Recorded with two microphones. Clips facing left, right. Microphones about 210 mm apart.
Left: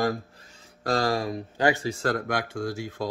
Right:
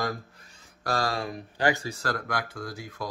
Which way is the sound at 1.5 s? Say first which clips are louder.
Left 2 dB; 20° left (ahead or behind).